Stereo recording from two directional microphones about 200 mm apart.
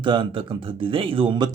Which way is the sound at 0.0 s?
25° right (ahead or behind).